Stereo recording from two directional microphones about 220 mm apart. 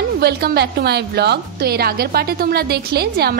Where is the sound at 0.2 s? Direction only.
45° right (ahead or behind).